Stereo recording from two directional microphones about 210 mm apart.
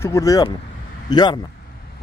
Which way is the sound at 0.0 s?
15° left (ahead or behind).